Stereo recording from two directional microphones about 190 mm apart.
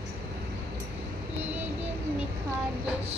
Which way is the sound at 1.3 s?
10° right (ahead or behind).